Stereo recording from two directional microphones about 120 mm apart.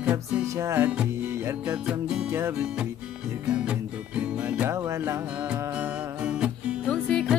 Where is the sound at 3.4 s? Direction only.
10° right (ahead or behind).